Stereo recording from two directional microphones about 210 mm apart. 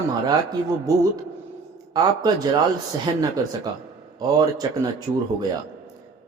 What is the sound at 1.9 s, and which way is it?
A man's voice, 20° right (ahead or behind).